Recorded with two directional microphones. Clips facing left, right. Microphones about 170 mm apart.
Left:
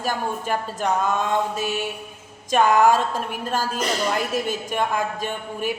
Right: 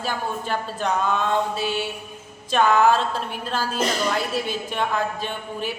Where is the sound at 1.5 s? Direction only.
45° left (ahead or behind).